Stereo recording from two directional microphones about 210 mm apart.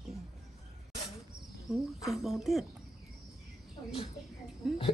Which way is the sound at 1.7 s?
Centre (ahead or behind).